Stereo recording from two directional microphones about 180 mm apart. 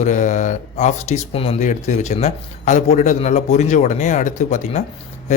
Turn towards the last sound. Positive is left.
turn(degrees=40)  # may be behind; listen again after turning